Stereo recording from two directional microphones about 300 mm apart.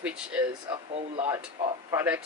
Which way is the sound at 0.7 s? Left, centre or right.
Centre.